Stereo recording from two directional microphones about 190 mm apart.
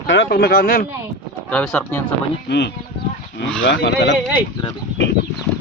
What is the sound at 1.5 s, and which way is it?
Speech, 5° left (ahead or behind).